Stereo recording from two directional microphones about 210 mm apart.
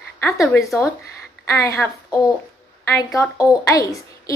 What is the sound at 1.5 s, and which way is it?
A woman's voice, 15° left (ahead or behind).